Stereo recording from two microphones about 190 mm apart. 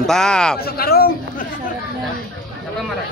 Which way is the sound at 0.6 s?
55° left (ahead or behind).